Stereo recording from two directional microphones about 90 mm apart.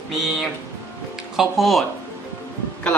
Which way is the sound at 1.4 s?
Centre (ahead or behind).